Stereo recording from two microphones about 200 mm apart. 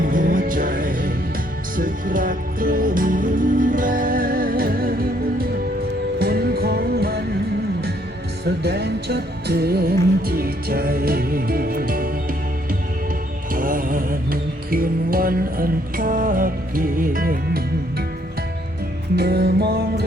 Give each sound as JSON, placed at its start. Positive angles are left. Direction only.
{"t": 0.0, "sound": "music", "side_deg": -40}
{"t": 8.4, "sound": "music", "side_deg": -55}
{"t": 13.5, "sound": "music", "side_deg": -45}
{"t": 19.1, "sound": "music", "side_deg": -55}